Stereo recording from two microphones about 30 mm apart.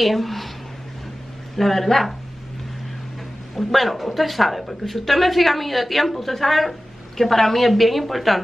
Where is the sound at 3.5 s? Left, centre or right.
Centre.